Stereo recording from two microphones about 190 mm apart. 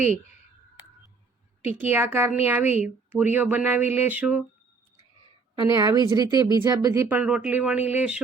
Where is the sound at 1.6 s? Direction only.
10° right (ahead or behind).